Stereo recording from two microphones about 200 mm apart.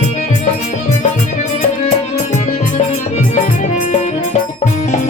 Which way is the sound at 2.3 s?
35° left (ahead or behind).